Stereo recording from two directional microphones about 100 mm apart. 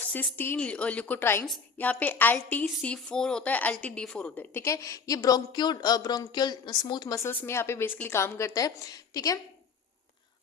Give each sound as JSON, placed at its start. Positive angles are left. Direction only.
{"t": 0.1, "sound": "a woman's voice", "side_deg": 20}
{"t": 4.6, "sound": "speech", "side_deg": 30}
{"t": 7.2, "sound": "a woman's voice", "side_deg": 25}